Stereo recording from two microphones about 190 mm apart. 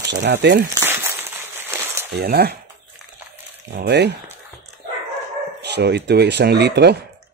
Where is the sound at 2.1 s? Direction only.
55° right (ahead or behind).